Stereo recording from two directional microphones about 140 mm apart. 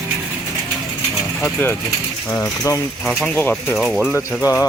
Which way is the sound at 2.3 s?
20° left (ahead or behind).